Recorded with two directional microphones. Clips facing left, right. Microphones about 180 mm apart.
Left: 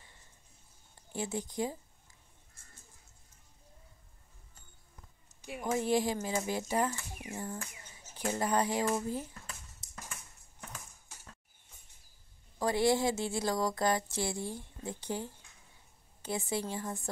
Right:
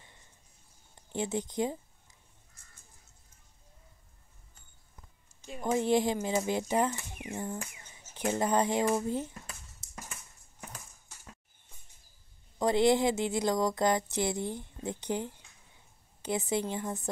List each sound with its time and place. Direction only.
1.1 s speech: 20° right (ahead or behind)
5.7 s speech: 20° right (ahead or behind)
12.5 s speech: 20° right (ahead or behind)